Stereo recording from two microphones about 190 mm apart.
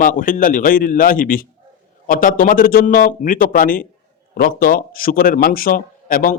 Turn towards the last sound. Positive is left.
turn(degrees=45)  # may be behind; listen again after turning